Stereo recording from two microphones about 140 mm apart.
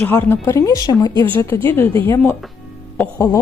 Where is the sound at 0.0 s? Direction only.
15° left (ahead or behind); by 1.2 s 30° left (ahead or behind).